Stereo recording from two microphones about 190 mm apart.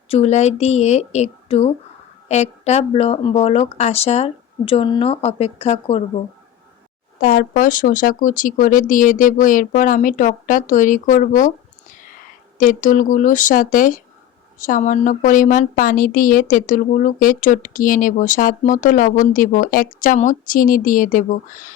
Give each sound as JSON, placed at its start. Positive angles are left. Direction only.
{"t": 0.1, "sound": "speech", "side_deg": 35}
{"t": 7.2, "sound": "a woman's voice", "side_deg": 45}